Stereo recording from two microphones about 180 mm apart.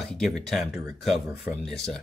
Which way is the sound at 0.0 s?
Centre (ahead or behind).